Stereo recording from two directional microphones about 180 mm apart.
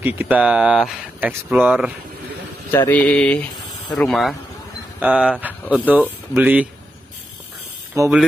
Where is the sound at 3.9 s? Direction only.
Centre (ahead or behind).